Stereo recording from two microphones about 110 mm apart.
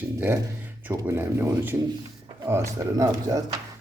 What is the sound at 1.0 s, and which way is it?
Speech, 20° right (ahead or behind).